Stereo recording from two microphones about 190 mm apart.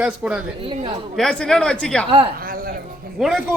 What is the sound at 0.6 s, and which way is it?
Speech, 25° right (ahead or behind).